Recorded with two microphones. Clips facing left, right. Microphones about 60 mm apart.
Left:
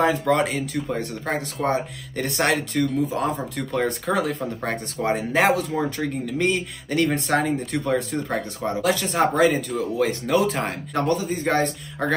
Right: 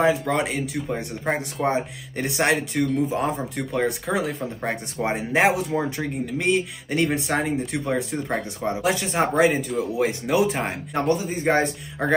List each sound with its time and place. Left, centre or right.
0.0 s speech: centre